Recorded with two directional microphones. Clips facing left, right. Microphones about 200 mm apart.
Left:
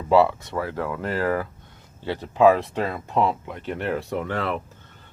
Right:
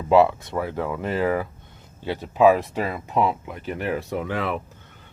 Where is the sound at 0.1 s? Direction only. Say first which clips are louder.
Right 1 dB; 15° right (ahead or behind).